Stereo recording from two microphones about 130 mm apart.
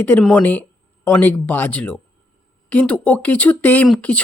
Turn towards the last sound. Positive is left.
turn(degrees=10)  # may be behind; listen again after turning